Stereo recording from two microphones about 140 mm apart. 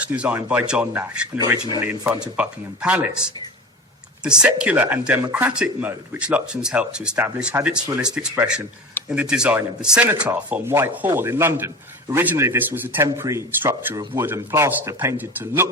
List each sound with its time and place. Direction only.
0.0 s speech: 10° right (ahead or behind)